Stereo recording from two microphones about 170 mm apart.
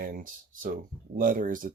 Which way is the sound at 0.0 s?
55° right (ahead or behind).